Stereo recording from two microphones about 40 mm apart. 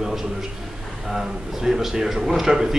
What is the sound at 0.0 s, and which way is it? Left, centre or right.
A man's voice, centre.